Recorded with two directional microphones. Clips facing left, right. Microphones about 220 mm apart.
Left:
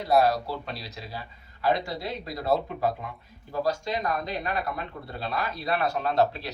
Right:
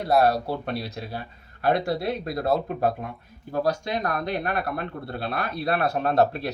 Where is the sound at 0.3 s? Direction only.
55° right (ahead or behind).